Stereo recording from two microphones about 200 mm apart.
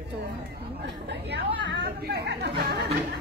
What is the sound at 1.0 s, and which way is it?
Speech, 60° right (ahead or behind).